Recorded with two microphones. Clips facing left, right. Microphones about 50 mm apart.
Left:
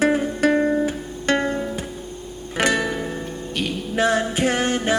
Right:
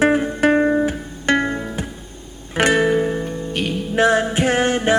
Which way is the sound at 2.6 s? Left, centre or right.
Right.